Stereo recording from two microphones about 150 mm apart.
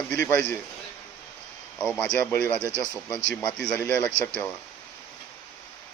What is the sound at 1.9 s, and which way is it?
Speech, 10° left (ahead or behind).